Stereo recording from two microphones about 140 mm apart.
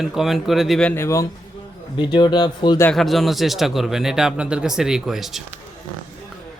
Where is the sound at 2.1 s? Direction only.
30° left (ahead or behind).